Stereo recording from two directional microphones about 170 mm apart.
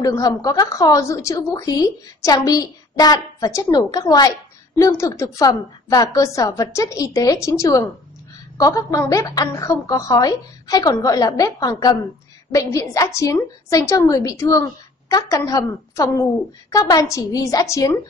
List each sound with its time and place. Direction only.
0.0 s a woman's voice: 20° left (ahead or behind)